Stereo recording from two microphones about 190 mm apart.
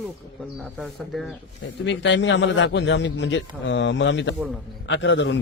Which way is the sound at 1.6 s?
75° left (ahead or behind).